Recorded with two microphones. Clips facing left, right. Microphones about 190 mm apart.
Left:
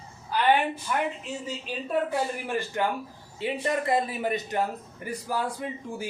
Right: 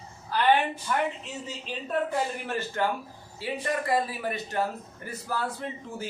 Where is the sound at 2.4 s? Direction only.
15° left (ahead or behind).